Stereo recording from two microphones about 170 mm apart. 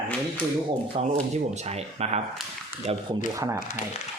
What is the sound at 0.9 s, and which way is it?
Speech, 35° right (ahead or behind).